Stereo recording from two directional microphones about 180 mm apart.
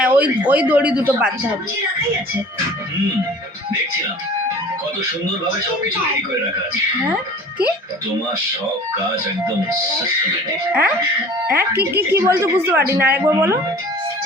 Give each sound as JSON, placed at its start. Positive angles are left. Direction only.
{"t": 0.0, "sound": "speech", "side_deg": -10}
{"t": 10.7, "sound": "speech", "side_deg": -5}